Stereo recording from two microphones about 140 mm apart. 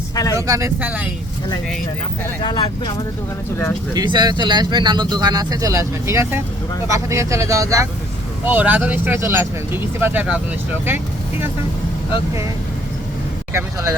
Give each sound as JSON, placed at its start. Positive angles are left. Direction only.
{"t": 0.3, "sound": "speech", "side_deg": -25}
{"t": 0.8, "sound": "speech", "side_deg": -10}
{"t": 2.4, "sound": "speech", "side_deg": 35}
{"t": 3.9, "sound": "speech", "side_deg": -30}
{"t": 8.4, "sound": "speech", "side_deg": -10}
{"t": 13.5, "sound": "speech", "side_deg": -20}